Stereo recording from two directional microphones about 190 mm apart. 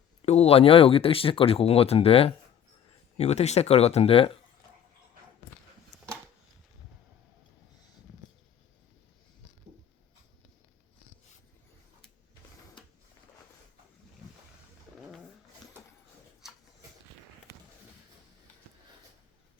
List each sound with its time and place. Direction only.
0.2 s speech: 35° left (ahead or behind)